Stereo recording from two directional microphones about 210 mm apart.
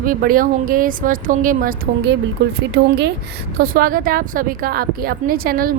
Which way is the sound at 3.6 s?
40° right (ahead or behind).